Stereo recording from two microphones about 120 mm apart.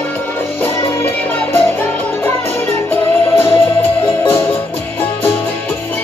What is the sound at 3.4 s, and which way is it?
Music, 20° left (ahead or behind).